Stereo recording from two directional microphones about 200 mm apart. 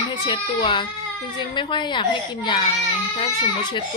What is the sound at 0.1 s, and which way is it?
A child's voice, 25° left (ahead or behind).